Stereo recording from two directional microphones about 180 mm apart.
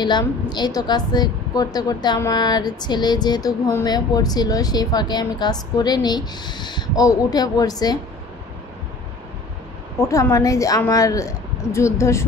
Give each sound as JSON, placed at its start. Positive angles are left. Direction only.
{"t": 0.0, "sound": "a woman's voice", "side_deg": 25}
{"t": 9.9, "sound": "a woman's voice", "side_deg": 15}